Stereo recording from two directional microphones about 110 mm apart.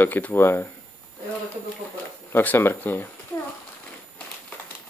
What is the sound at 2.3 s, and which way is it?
Speech, 20° left (ahead or behind).